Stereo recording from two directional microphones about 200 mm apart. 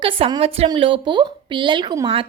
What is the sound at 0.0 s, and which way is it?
A woman's voice, 25° right (ahead or behind).